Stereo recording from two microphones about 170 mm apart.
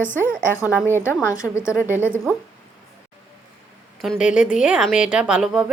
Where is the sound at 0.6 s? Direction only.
10° right (ahead or behind).